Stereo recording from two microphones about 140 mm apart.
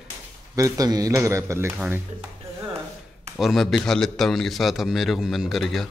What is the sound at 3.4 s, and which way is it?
A man's voice, centre (ahead or behind).